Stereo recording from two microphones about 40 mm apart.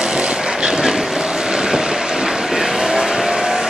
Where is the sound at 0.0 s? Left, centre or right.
Centre.